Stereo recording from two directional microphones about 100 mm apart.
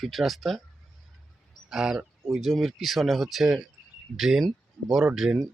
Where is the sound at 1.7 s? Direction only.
5° right (ahead or behind).